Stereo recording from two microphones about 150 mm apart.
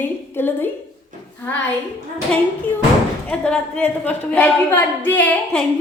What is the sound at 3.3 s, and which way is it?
A woman's voice, 5° left (ahead or behind).